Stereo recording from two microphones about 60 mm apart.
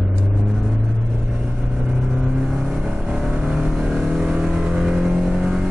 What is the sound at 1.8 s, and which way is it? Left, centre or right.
Vehicle, centre.